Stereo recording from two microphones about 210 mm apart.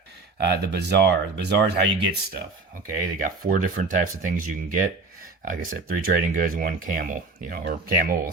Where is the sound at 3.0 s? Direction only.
40° right (ahead or behind).